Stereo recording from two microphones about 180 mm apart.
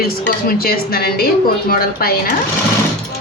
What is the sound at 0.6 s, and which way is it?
Speech, 55° left (ahead or behind).